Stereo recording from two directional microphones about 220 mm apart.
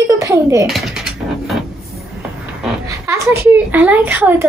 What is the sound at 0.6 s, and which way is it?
Mechanisms, centre (ahead or behind).